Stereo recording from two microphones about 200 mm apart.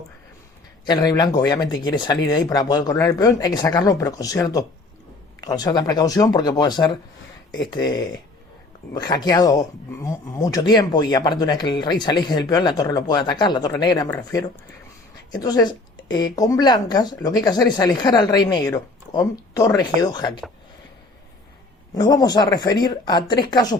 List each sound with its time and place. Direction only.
0.9 s speech: 20° left (ahead or behind)
21.9 s speech: 20° left (ahead or behind)